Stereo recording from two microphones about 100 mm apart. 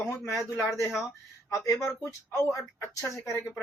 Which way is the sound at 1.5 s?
30° left (ahead or behind).